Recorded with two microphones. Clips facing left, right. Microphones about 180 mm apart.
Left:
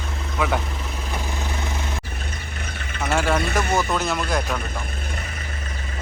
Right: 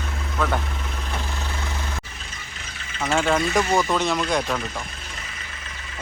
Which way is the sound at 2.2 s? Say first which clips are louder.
Left 6 dB; 55° left (ahead or behind).